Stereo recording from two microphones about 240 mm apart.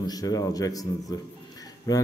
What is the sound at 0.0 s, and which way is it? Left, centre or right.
A man's voice, centre.